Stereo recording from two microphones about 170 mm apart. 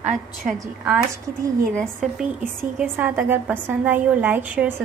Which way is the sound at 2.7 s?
10° right (ahead or behind).